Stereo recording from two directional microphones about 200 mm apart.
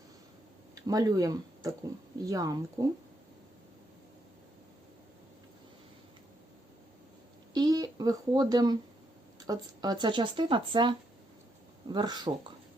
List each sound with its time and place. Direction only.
0.8 s speech: 20° right (ahead or behind)
7.5 s a sound: 20° right (ahead or behind)
9.5 s speech: 20° right (ahead or behind)